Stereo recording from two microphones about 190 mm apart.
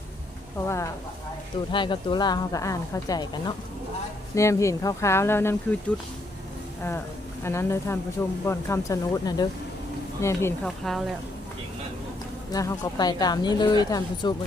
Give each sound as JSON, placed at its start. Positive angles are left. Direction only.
{"t": 0.6, "sound": "speech", "side_deg": 15}
{"t": 7.4, "sound": "speech", "side_deg": 15}
{"t": 10.6, "sound": "speech", "side_deg": 0}
{"t": 12.5, "sound": "speech", "side_deg": 15}